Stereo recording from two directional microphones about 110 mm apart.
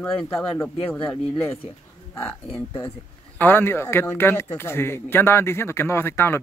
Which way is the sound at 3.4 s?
20° left (ahead or behind).